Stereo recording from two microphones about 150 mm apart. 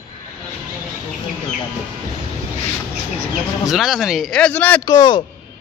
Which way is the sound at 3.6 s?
Centre (ahead or behind).